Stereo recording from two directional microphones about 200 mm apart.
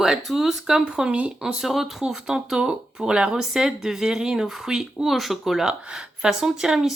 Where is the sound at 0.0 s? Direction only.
Centre (ahead or behind).